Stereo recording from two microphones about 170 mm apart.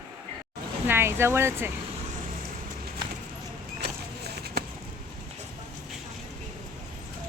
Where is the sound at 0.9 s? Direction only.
15° right (ahead or behind).